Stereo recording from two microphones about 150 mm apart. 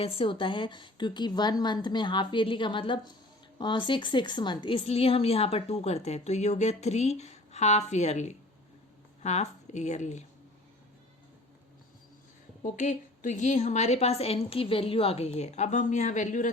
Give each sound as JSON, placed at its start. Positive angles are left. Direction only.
{"t": 0.0, "sound": "a woman's voice", "side_deg": 35}
{"t": 12.6, "sound": "a woman's voice", "side_deg": 55}